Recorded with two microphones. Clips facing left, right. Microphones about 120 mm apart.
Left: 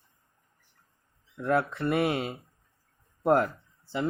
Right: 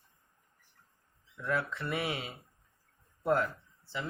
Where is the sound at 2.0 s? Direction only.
45° left (ahead or behind).